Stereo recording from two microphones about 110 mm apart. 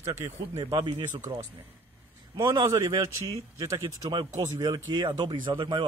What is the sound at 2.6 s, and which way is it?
Speech, 35° right (ahead or behind).